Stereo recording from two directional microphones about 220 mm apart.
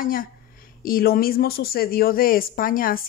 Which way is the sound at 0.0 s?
40° left (ahead or behind).